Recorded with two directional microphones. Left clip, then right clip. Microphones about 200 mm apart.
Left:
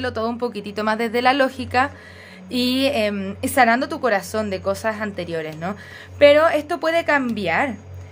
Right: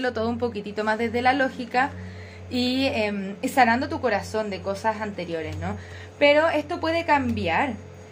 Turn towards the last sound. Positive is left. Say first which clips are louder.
# left 3 dB
turn(degrees=40)  # may be behind; listen again after turning